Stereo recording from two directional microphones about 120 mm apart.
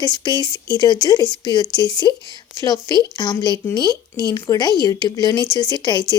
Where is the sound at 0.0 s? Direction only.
35° left (ahead or behind).